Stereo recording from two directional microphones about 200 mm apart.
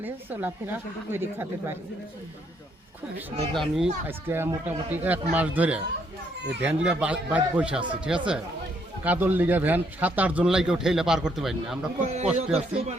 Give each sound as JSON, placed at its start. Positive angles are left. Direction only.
{"t": 0.0, "sound": "speech", "side_deg": -10}
{"t": 3.5, "sound": "speech", "side_deg": 0}
{"t": 4.0, "sound": "speech", "side_deg": -10}
{"t": 11.9, "sound": "a man's voice", "side_deg": -35}